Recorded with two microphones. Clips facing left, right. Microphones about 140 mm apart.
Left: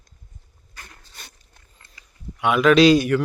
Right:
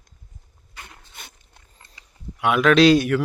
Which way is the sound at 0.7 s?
20° right (ahead or behind).